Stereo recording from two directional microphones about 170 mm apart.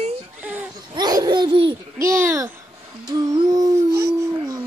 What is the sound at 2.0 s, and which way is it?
Speech, 15° right (ahead or behind).